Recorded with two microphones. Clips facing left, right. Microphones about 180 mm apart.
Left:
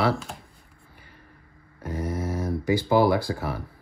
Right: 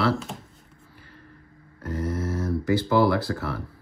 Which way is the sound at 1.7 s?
15° left (ahead or behind).